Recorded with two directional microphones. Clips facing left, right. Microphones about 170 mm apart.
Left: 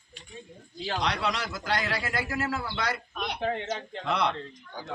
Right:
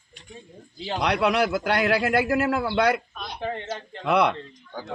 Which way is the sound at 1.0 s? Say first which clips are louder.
Right 10 dB; 60° right (ahead or behind).